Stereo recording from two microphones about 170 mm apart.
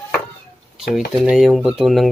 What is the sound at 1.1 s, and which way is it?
Speech, 5° right (ahead or behind).